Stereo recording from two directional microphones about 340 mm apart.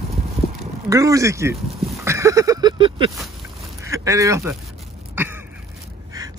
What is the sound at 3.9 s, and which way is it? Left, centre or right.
Speech, centre.